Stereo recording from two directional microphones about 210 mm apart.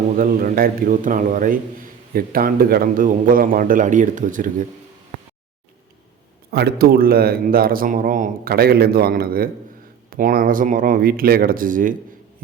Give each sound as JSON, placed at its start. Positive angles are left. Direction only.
{"t": 0.2, "sound": "a man's voice", "side_deg": -45}
{"t": 6.5, "sound": "a man's voice", "side_deg": -50}